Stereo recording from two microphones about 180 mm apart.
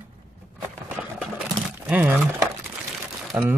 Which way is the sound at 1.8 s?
10° right (ahead or behind).